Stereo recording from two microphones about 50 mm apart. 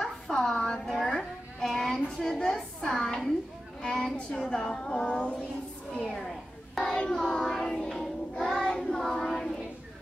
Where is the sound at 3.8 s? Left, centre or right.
Centre.